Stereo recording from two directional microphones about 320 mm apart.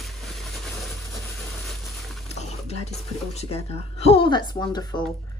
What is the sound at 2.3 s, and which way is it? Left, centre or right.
Speech, centre.